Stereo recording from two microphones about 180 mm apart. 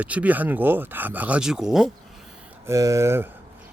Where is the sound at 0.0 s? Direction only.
10° right (ahead or behind).